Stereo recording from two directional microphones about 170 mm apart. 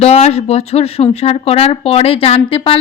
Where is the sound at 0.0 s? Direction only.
40° left (ahead or behind).